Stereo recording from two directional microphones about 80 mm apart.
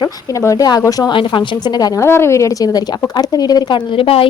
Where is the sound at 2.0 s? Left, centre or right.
Left.